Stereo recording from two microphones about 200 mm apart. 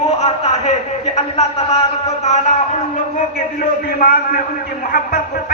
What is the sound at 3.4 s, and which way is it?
A man's voice, 45° left (ahead or behind).